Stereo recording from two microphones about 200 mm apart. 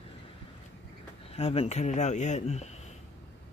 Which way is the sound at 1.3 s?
30° left (ahead or behind).